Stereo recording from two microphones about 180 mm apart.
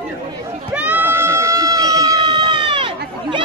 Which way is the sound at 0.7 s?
10° right (ahead or behind).